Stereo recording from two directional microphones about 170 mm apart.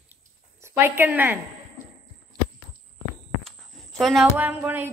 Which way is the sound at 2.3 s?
25° right (ahead or behind).